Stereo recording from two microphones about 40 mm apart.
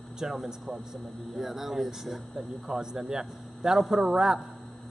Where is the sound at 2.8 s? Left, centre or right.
Centre.